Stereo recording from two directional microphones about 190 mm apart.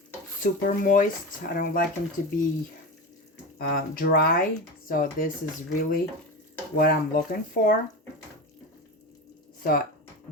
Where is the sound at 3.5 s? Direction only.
50° left (ahead or behind).